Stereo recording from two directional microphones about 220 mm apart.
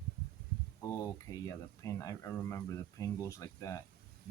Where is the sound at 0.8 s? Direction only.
15° left (ahead or behind).